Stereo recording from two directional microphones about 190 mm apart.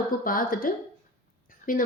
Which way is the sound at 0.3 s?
45° left (ahead or behind).